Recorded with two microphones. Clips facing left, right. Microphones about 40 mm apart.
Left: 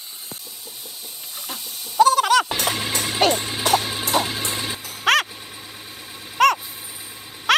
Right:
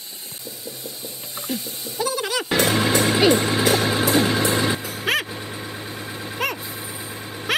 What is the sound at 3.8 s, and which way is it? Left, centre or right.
Music, right.